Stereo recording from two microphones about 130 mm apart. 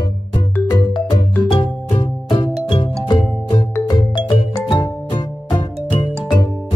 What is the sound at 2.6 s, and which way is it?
Music, 35° left (ahead or behind).